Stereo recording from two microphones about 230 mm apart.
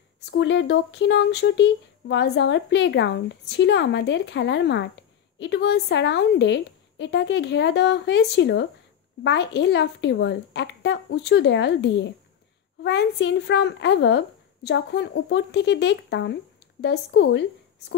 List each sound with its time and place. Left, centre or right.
0.2 s speech: left